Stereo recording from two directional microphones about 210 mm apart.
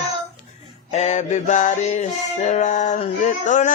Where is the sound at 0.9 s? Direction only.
35° left (ahead or behind).